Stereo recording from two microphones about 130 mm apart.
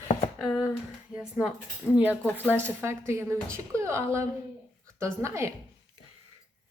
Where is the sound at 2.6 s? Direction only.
20° right (ahead or behind).